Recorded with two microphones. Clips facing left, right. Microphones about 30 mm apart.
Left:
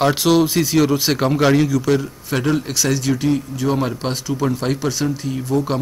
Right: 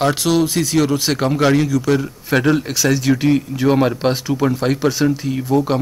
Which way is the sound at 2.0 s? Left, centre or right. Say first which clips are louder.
Right 4 dB; centre.